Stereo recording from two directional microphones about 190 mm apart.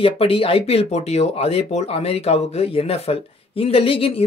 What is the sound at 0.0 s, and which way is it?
Speech, 30° left (ahead or behind).